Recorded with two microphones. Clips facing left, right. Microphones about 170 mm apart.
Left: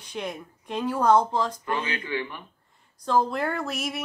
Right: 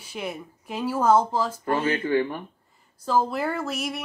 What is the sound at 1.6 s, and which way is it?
Speech, 45° right (ahead or behind).